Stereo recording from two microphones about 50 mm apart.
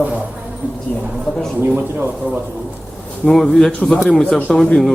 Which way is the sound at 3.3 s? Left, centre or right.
Centre.